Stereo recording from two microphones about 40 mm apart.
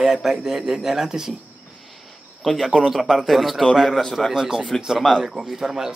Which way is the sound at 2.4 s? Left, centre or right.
Centre.